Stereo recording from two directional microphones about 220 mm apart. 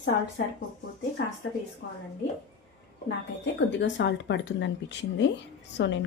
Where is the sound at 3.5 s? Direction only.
55° left (ahead or behind).